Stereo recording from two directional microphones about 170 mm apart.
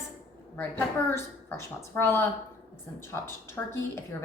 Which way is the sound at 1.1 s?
15° left (ahead or behind).